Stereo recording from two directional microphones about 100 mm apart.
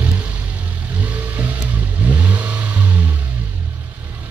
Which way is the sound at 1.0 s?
15° right (ahead or behind).